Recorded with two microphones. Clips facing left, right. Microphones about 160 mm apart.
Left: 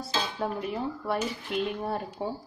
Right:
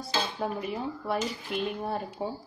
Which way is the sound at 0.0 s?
Centre (ahead or behind).